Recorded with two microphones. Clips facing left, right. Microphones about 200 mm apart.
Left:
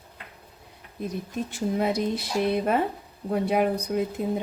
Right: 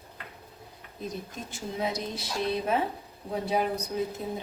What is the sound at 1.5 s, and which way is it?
Speech, 60° left (ahead or behind).